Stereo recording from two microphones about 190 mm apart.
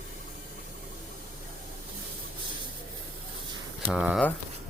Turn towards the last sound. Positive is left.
turn(degrees=-5)  # may be behind; listen again after turning